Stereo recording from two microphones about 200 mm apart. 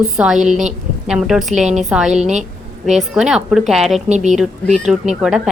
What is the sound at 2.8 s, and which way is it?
Speech, 5° right (ahead or behind).